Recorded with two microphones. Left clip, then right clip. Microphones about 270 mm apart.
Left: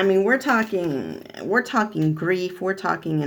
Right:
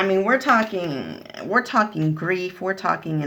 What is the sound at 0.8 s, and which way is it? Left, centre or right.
Speech, centre.